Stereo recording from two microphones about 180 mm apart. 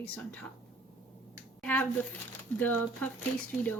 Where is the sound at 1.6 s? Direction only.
10° left (ahead or behind).